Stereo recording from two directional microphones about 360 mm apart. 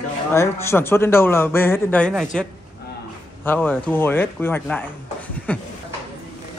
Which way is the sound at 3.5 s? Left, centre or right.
Centre.